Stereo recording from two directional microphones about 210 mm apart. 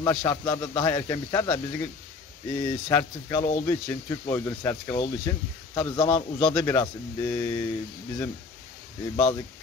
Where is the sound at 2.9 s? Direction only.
10° left (ahead or behind).